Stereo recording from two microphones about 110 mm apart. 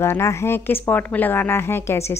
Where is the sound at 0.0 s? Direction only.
25° left (ahead or behind).